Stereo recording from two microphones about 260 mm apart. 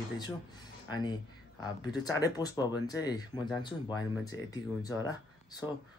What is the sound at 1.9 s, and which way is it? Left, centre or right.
Speech, centre.